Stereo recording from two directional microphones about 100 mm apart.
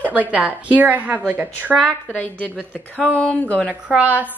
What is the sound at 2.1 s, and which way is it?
Speech, 15° left (ahead or behind).